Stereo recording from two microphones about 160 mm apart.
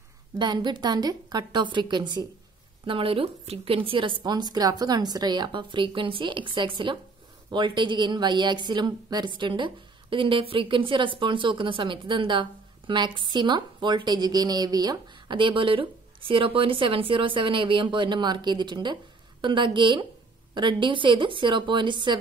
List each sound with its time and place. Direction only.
0.4 s a woman's voice: 30° right (ahead or behind)